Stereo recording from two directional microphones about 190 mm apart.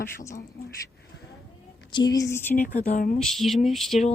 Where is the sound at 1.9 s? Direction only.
20° left (ahead or behind).